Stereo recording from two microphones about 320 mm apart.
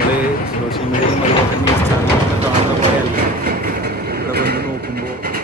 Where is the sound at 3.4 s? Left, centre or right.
Right.